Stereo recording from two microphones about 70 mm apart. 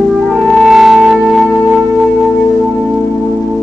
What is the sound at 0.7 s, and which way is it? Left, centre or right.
Music, centre.